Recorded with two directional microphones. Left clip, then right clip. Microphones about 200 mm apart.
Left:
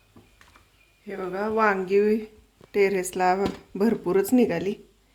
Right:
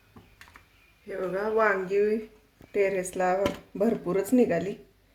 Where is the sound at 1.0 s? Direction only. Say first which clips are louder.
Left 1 dB; 50° left (ahead or behind).